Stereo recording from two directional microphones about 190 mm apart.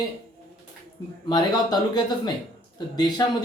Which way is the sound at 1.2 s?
20° left (ahead or behind).